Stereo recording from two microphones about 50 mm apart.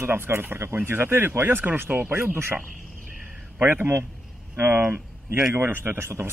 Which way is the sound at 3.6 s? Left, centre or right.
Right.